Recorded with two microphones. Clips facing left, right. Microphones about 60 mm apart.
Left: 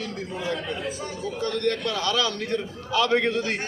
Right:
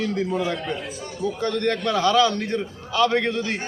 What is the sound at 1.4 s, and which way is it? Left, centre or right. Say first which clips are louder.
Speech: right 1 dB; right.